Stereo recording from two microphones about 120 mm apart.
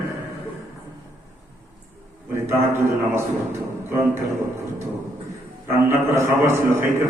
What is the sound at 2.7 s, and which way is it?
A man's voice, 20° right (ahead or behind).